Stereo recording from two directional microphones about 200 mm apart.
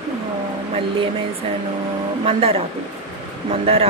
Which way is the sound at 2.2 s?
30° right (ahead or behind).